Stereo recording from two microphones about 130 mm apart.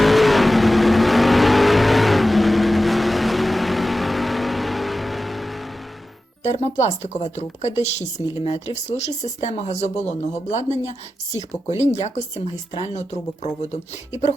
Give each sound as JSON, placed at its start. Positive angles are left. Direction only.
{"t": 0.0, "sound": "vehicle", "side_deg": 0}
{"t": 6.4, "sound": "speech", "side_deg": 60}